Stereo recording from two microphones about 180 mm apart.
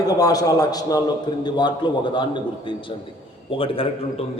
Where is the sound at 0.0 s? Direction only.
20° left (ahead or behind).